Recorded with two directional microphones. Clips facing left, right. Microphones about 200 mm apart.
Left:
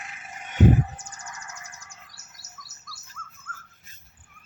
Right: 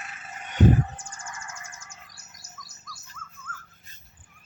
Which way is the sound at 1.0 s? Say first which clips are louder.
Right 1 dB; 20° left (ahead or behind).